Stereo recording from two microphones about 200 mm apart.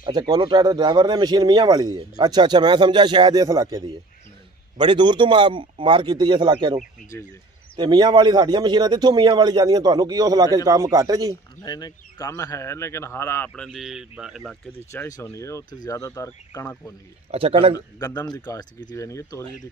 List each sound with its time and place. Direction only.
0.0 s speech: 20° right (ahead or behind)
11.6 s speech: 20° left (ahead or behind); by 14.4 s 5° right (ahead or behind)
14.9 s speech: 15° left (ahead or behind)
17.3 s speech: 30° right (ahead or behind)
17.7 s speech: 20° left (ahead or behind)